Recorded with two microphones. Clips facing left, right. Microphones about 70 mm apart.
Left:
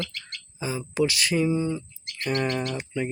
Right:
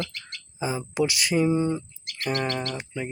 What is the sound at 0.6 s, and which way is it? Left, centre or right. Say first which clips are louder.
Speech: even; right.